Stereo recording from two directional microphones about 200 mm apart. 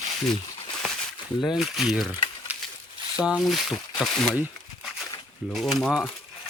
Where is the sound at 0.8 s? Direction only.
Centre (ahead or behind).